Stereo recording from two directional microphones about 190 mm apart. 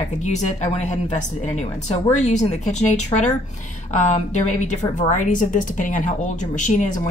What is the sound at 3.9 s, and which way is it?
A woman's voice, 40° left (ahead or behind).